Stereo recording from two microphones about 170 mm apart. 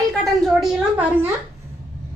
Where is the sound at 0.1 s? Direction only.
Centre (ahead or behind).